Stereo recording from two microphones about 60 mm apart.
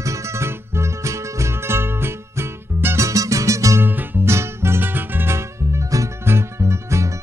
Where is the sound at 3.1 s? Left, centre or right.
Right.